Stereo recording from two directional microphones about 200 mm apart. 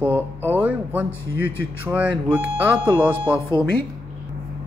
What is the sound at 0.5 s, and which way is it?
Speech, 5° right (ahead or behind).